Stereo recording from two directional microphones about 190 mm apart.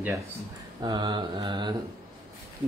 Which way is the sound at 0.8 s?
25° right (ahead or behind).